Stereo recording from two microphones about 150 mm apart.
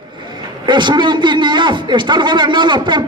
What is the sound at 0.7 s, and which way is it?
A man's voice, 30° right (ahead or behind).